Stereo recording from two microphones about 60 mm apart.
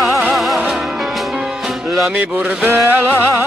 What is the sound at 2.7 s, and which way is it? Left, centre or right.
Music, right.